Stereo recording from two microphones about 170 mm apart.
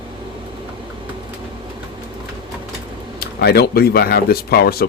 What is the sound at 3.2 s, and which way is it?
Speech, 70° left (ahead or behind).